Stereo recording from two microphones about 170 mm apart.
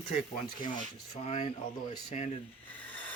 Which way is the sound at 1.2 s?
40° left (ahead or behind).